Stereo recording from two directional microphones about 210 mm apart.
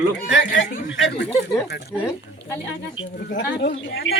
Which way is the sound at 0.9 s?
65° left (ahead or behind).